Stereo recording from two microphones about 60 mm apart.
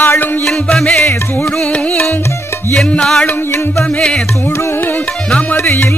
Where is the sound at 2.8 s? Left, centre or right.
Centre.